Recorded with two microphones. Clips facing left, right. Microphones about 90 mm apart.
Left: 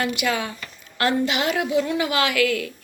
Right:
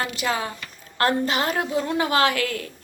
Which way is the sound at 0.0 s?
35° right (ahead or behind).